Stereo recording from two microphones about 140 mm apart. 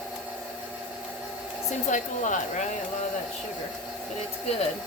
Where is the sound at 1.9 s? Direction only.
65° left (ahead or behind).